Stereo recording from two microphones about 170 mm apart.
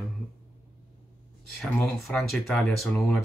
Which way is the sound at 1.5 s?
Centre (ahead or behind).